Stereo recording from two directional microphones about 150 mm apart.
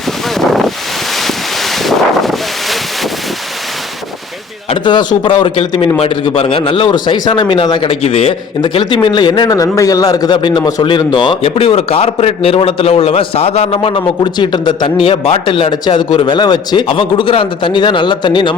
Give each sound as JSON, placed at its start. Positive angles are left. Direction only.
{"t": 1.7, "sound": "wind noise", "side_deg": 0}
{"t": 4.7, "sound": "a sound", "side_deg": 30}
{"t": 5.2, "sound": "a man's voice", "side_deg": 35}